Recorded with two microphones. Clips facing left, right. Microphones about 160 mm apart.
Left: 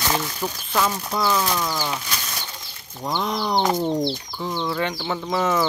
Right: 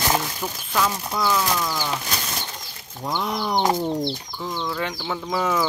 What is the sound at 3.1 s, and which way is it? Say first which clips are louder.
Speech: left 1 dB; 10° right (ahead or behind).